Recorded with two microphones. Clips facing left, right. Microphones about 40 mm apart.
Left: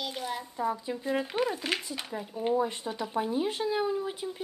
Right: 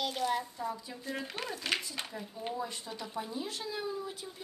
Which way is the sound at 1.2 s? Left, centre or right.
Centre.